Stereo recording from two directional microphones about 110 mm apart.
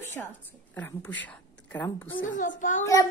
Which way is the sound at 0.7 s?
15° left (ahead or behind).